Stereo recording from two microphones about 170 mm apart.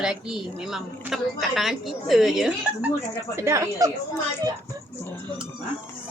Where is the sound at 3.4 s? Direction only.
15° right (ahead or behind).